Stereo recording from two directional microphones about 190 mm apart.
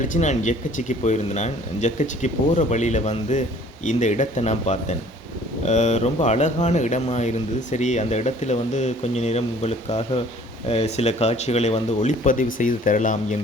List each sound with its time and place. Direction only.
0.1 s speech: 40° left (ahead or behind)